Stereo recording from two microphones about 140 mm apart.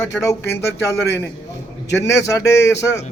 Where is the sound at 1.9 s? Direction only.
20° left (ahead or behind).